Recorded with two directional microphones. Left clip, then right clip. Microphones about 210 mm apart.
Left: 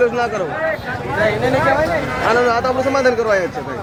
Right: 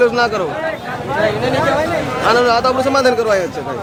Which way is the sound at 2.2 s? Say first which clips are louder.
Right 3 dB; 5° right (ahead or behind).